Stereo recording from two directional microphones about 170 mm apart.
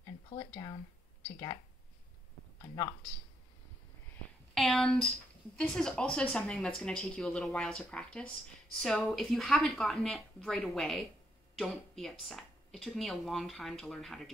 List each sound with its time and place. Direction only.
0.4 s speech: 25° left (ahead or behind)
2.6 s speech: 25° left (ahead or behind)
4.6 s speech: centre (ahead or behind)